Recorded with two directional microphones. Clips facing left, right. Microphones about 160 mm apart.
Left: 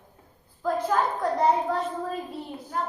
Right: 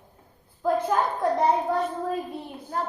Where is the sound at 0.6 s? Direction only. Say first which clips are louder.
Right 1 dB; 25° right (ahead or behind).